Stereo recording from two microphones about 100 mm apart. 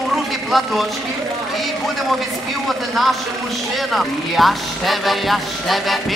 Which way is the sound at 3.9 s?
Centre (ahead or behind).